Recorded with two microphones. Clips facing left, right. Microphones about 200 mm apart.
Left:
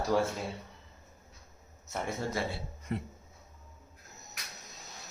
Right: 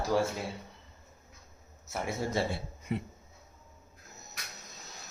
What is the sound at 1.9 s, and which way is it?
Speech, 5° right (ahead or behind).